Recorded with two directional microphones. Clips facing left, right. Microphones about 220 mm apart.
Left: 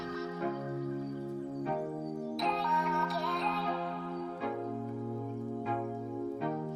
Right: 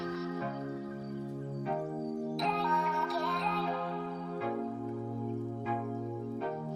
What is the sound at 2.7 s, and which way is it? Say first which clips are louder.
Music: even; centre (ahead or behind).